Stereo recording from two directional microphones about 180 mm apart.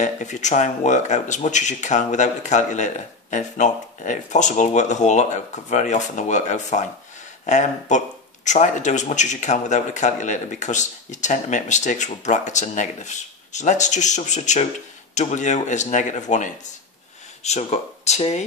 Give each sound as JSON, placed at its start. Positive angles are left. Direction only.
{"t": 0.0, "sound": "speech", "side_deg": 40}